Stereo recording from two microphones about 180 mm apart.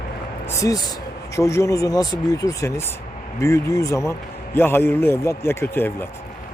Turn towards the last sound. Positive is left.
turn(degrees=10)  # may be behind; listen again after turning